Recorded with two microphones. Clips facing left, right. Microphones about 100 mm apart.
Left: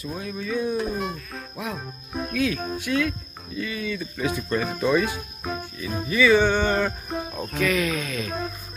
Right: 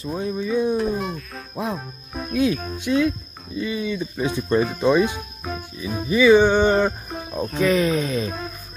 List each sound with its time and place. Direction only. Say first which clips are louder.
0.0 s speech: right 6 dB; 25° right (ahead or behind)
0.7 s speech: right 3 dB; centre (ahead or behind)
1.6 s speech: right 6 dB; 30° right (ahead or behind)
7.5 s speech: right 5 dB; 30° right (ahead or behind)